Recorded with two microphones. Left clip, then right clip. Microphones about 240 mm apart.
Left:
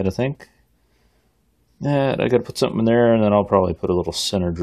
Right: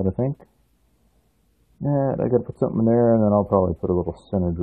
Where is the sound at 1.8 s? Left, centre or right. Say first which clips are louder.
Left 3 dB; left.